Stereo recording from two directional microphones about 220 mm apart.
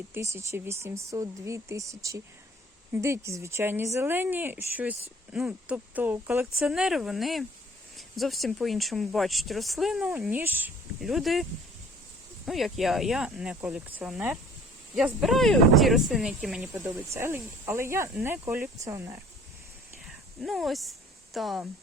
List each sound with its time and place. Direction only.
0.1 s speech: 10° right (ahead or behind)
12.5 s speech: centre (ahead or behind)
20.4 s speech: centre (ahead or behind)